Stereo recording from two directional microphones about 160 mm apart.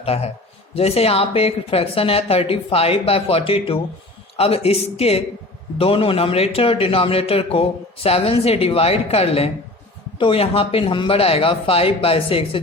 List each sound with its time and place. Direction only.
0.0 s a man's voice: 40° left (ahead or behind)